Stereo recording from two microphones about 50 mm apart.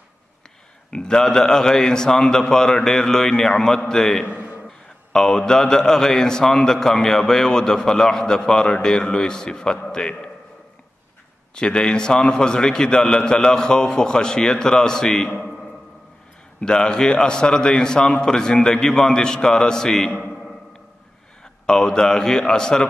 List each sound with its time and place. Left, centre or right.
0.8 s a man's voice: centre
4.3 s a sound: right
4.6 s a man's voice: centre
11.5 s a man's voice: centre
15.4 s a sound: centre
16.6 s a man's voice: centre
21.6 s a man's voice: centre